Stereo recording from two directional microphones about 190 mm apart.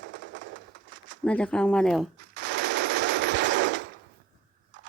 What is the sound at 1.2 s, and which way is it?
Speech, 5° left (ahead or behind).